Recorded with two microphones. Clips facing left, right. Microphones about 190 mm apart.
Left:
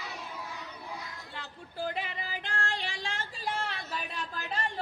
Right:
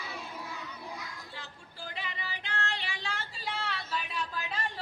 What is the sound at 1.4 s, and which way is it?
Female singing, 55° left (ahead or behind).